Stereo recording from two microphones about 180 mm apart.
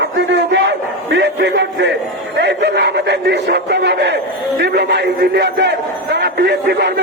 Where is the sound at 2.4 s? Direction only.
80° right.